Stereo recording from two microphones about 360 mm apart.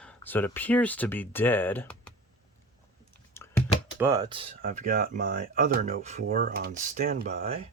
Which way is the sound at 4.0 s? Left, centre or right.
Centre.